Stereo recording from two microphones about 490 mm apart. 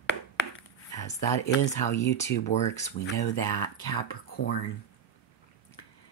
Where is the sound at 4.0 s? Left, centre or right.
Centre.